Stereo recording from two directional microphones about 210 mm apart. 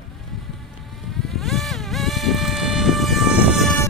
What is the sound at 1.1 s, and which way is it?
Vehicle, centre (ahead or behind).